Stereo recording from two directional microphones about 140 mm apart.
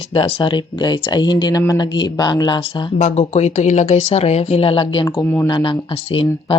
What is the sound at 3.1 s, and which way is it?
Speech, 50° left (ahead or behind).